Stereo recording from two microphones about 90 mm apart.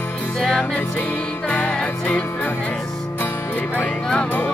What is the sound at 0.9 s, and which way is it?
Music, 15° left (ahead or behind).